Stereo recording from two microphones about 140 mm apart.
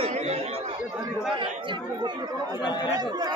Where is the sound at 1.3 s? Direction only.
35° right (ahead or behind).